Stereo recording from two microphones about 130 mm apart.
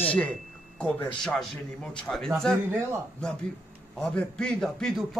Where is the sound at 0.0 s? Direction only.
10° left (ahead or behind).